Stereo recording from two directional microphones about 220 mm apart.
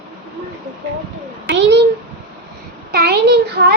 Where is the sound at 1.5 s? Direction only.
55° right (ahead or behind).